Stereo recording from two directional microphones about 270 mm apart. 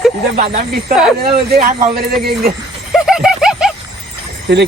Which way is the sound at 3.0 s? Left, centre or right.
Centre.